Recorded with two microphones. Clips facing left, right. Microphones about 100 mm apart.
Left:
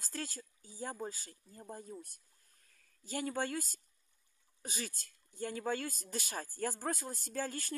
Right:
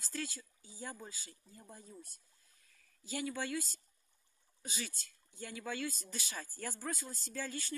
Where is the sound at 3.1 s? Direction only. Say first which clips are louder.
Left 2 dB; 45° left (ahead or behind).